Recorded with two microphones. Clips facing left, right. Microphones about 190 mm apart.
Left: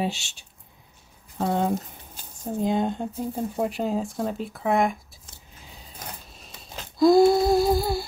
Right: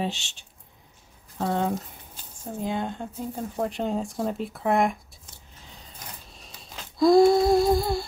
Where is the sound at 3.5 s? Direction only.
5° left (ahead or behind).